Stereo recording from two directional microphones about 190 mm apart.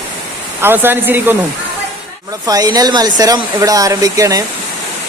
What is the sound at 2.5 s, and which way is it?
Speech, 20° right (ahead or behind).